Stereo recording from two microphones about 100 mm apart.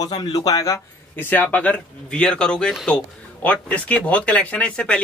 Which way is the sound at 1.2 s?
20° left (ahead or behind).